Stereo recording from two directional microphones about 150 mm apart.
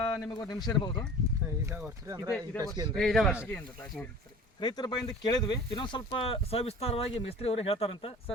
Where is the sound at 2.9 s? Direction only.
Centre (ahead or behind).